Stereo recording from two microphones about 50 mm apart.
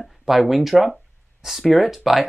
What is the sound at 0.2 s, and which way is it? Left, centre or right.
Speech, centre.